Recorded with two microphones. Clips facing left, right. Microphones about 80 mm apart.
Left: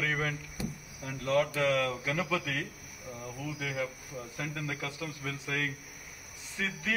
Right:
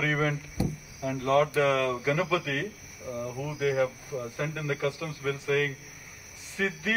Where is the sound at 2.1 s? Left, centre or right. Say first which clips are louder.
Right 5 dB; centre.